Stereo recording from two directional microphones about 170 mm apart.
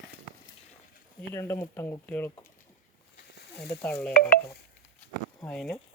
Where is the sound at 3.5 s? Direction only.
5° left (ahead or behind).